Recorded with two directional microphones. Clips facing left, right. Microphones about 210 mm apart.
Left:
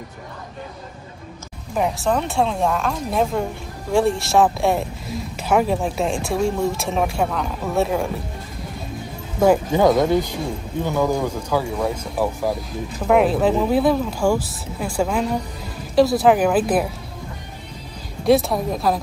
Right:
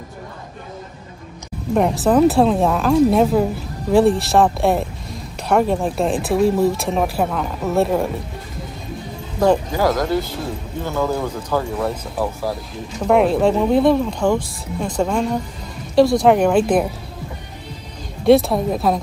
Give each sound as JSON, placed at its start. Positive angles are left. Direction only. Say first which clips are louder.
{"t": 1.8, "sound": "speech", "louder": "right 6 dB", "side_deg": 0}
{"t": 9.7, "sound": "speech", "louder": "left 3 dB", "side_deg": 20}
{"t": 18.2, "sound": "speech", "louder": "right 4 dB", "side_deg": 0}